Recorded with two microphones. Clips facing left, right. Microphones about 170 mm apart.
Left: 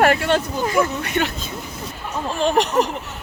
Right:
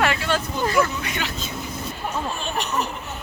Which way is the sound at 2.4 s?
90° left.